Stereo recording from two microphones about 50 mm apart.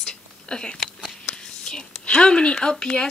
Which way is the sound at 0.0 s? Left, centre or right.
Centre.